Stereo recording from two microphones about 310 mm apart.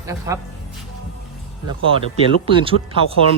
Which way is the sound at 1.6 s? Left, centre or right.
Centre.